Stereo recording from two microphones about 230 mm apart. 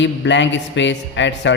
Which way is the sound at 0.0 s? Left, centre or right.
Left.